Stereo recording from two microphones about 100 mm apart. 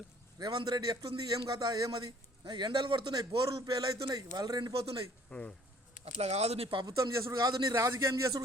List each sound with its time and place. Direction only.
0.3 s a man's voice: 45° right (ahead or behind)
4.7 s a man's voice: 70° right (ahead or behind)
5.3 s speech: 15° left (ahead or behind)
6.1 s speech: 90° right; by 6.8 s 70° right (ahead or behind)
6.8 s a man's voice: 30° right (ahead or behind)